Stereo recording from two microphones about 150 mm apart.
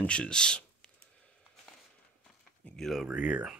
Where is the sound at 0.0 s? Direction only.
5° left (ahead or behind).